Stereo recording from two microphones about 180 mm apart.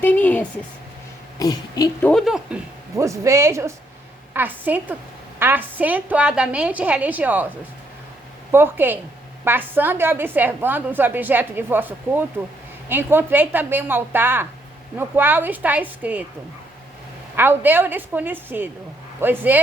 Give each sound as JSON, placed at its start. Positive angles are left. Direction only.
{"t": 0.0, "sound": "a woman's voice", "side_deg": 10}
{"t": 1.4, "sound": "a sound", "side_deg": 20}
{"t": 2.0, "sound": "speech", "side_deg": 0}
{"t": 2.9, "sound": "a woman's voice", "side_deg": -15}
{"t": 8.5, "sound": "a woman's voice", "side_deg": -10}
{"t": 17.3, "sound": "a woman's voice", "side_deg": -10}